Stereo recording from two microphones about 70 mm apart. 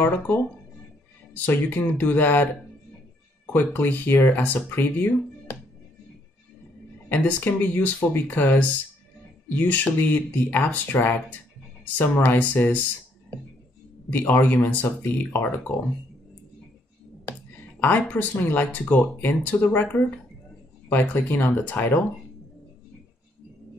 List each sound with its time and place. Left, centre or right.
1.3 s speech: left
7.1 s speech: left
14.2 s speech: left
17.3 s speech: left